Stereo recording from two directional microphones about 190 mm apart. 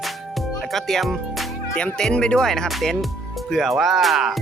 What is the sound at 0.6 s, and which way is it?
Speech, centre (ahead or behind).